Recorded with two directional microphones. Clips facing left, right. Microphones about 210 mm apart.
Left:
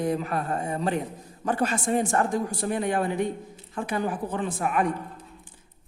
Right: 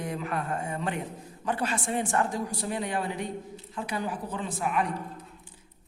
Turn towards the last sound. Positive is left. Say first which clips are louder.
# left 4 dB
turn(degrees=50)  # may be behind; listen again after turning